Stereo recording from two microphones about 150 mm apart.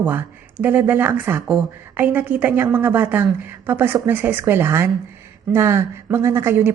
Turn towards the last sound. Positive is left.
turn(degrees=-15)  # may be behind; listen again after turning